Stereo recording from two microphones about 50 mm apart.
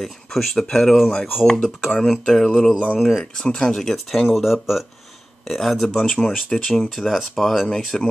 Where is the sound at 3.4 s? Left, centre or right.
Centre.